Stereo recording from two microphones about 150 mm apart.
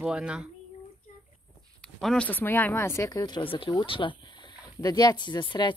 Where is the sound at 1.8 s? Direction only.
5° left (ahead or behind); by 5.7 s 30° left (ahead or behind).